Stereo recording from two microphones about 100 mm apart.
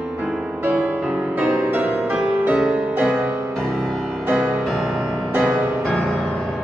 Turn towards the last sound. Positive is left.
turn(degrees=5)  # may be behind; listen again after turning